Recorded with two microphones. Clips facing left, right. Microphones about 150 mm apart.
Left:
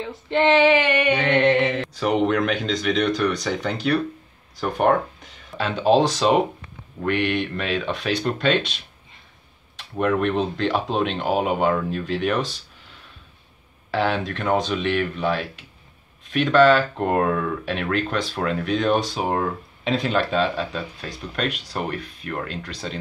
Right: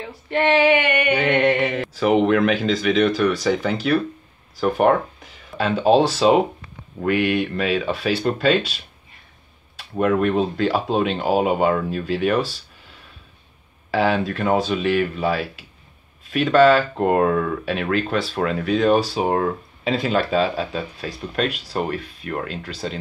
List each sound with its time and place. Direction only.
0.3 s a sound: 25° left (ahead or behind)
1.1 s speech: 10° right (ahead or behind)
9.9 s speech: 5° right (ahead or behind)
13.8 s speech: 5° right (ahead or behind)